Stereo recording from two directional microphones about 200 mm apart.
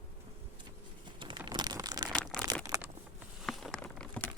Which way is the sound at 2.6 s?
15° right (ahead or behind).